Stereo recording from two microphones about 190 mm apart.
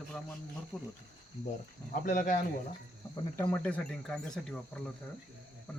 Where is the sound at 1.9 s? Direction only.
45° left (ahead or behind).